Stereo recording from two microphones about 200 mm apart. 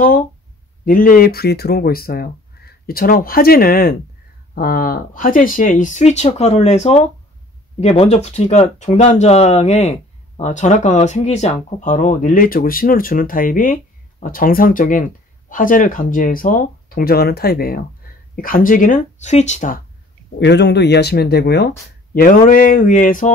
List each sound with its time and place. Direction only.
0.8 s speech: 45° left (ahead or behind)
20.3 s speech: 60° left (ahead or behind); by 23.3 s 40° left (ahead or behind)